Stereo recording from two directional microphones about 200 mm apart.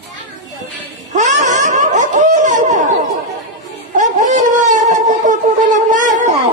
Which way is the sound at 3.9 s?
40° right (ahead or behind).